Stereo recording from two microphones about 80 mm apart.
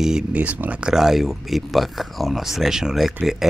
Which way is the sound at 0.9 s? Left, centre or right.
Centre.